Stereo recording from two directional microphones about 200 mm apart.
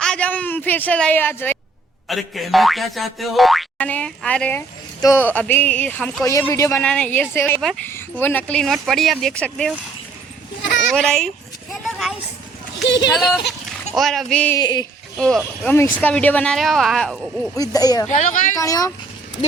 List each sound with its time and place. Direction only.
0.0 s a woman's voice: 5° left (ahead or behind)
2.0 s boing: centre (ahead or behind)
4.9 s speech: 15° left (ahead or behind)
7.9 s boing: 10° left (ahead or behind)
10.9 s boing: 5° left (ahead or behind)
11.7 s a sound: centre (ahead or behind)
12.8 s speech: 60° left (ahead or behind)
13.1 s boing: centre (ahead or behind)
14.6 s speech: 20° left (ahead or behind)
15.2 s boing: 5° left (ahead or behind)
17.6 s speech: 20° left (ahead or behind)
18.1 s speech: 40° left (ahead or behind)
18.5 s speech: 15° left (ahead or behind)